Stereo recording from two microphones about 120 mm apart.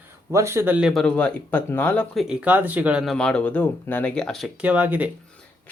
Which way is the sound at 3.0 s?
5° left (ahead or behind).